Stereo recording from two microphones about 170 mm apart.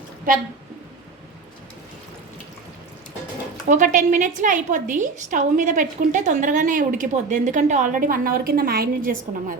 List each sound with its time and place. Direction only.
0.3 s a woman's voice: 55° right (ahead or behind)
3.7 s a woman's voice: 50° right (ahead or behind)